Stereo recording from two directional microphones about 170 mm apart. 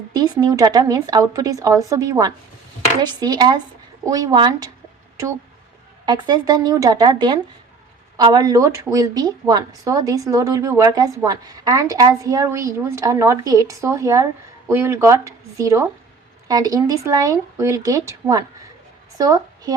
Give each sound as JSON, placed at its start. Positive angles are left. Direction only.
{"t": 0.1, "sound": "speech", "side_deg": -25}
{"t": 6.1, "sound": "a woman's voice", "side_deg": -25}